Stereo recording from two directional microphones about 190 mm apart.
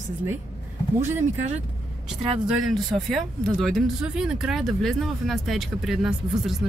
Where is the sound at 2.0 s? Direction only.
Centre (ahead or behind).